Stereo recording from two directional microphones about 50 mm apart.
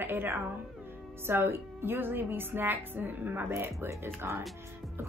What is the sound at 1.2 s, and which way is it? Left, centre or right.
A woman's voice, right.